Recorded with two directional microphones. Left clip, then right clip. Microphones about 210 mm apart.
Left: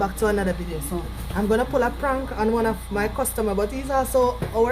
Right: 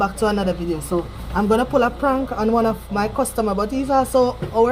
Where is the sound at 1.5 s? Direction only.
20° left (ahead or behind).